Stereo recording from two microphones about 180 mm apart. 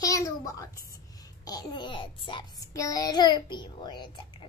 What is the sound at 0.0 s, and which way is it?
A child's voice, 20° left (ahead or behind).